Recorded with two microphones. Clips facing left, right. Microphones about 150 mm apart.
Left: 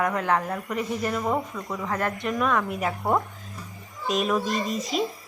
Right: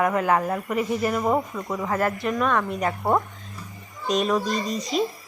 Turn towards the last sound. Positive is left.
turn(degrees=0)  # may be behind; listen again after turning